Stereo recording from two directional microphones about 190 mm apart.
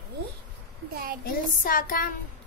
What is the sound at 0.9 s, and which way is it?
Speech, 50° right (ahead or behind).